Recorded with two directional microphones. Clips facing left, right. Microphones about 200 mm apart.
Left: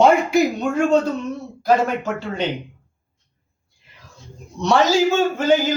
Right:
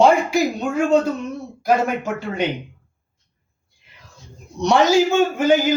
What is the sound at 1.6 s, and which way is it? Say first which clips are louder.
Speech: left 1 dB; 10° right (ahead or behind).